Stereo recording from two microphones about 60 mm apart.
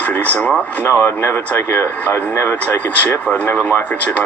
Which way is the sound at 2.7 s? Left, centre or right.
Left.